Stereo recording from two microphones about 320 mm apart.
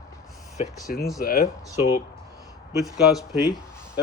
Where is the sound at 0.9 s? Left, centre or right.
Left.